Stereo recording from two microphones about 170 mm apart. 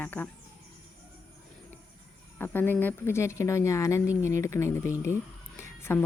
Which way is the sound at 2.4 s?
10° left (ahead or behind).